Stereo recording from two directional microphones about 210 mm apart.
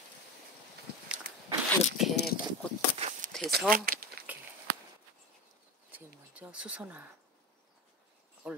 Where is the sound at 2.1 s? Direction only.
50° left (ahead or behind).